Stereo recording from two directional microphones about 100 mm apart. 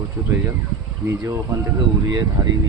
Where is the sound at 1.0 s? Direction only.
30° right (ahead or behind).